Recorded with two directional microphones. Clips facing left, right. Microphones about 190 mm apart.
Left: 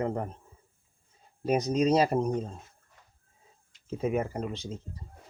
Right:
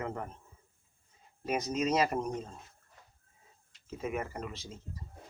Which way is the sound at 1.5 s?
35° left (ahead or behind).